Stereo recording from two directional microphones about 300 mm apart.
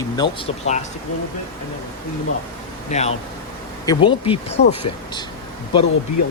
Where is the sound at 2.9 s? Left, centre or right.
Left.